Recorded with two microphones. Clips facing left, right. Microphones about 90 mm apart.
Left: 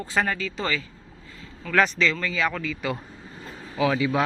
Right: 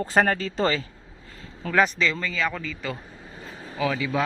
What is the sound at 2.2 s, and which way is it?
Speech, 5° left (ahead or behind).